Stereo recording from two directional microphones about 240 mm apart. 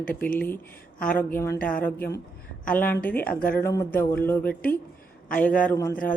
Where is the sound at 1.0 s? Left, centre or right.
Centre.